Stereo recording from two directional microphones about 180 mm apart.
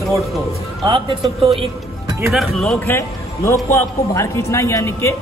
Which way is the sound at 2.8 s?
15° left (ahead or behind).